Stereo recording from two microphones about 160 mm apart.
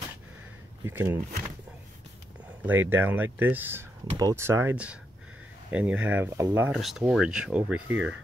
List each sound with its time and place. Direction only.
0.8 s speech: 15° right (ahead or behind)
2.6 s speech: 10° right (ahead or behind)
6.7 s speech: centre (ahead or behind)